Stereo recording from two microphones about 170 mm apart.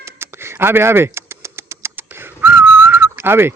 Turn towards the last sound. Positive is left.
turn(degrees=-15)  # may be behind; listen again after turning